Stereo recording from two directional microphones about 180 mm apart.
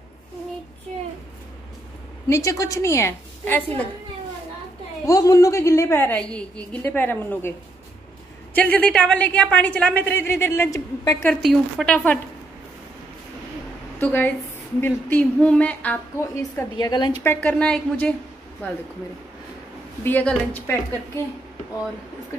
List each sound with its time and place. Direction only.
0.9 s a sound: 40° right (ahead or behind)
2.2 s a woman's voice: 15° left (ahead or behind)
5.0 s a woman's voice: 20° left (ahead or behind)
8.5 s a woman's voice: 10° left (ahead or behind)
11.4 s a woman's voice: 5° left (ahead or behind)
13.9 s a woman's voice: 10° left (ahead or behind)
16.5 s a woman's voice: 20° left (ahead or behind)
20.0 s a woman's voice: 10° left (ahead or behind)